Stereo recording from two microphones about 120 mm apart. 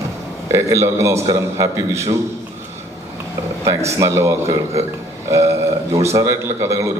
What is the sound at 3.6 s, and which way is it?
A woman's voice, 25° right (ahead or behind).